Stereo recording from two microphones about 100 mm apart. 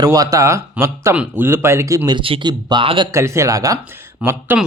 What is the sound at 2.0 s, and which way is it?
Speech, 60° right (ahead or behind).